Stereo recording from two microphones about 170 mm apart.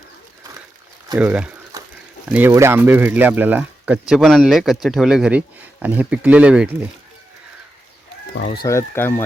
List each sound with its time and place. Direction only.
1.2 s speech: 10° right (ahead or behind)
1.7 s a sound: 20° right (ahead or behind)
2.3 s speech: 15° right (ahead or behind)
8.6 s speech: 15° left (ahead or behind)